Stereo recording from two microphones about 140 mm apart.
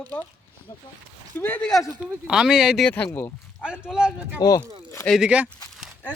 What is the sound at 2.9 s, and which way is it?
Speech, 10° left (ahead or behind).